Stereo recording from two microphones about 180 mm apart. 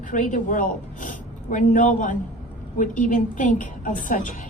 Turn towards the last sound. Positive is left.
turn(degrees=50)  # may be behind; listen again after turning